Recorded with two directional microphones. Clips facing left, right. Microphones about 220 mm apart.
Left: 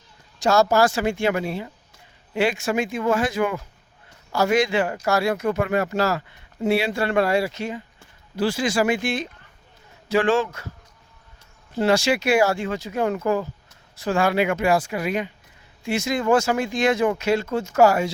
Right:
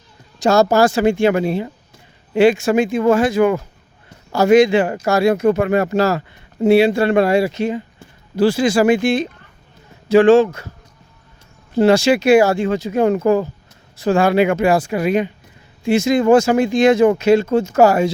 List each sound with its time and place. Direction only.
0.4 s speech: 20° right (ahead or behind)
4.3 s speech: 20° right (ahead or behind)
8.4 s speech: 30° right (ahead or behind)
11.7 s speech: 25° right (ahead or behind)